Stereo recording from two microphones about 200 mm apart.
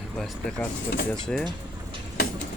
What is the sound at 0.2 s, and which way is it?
Speech, 5° left (ahead or behind).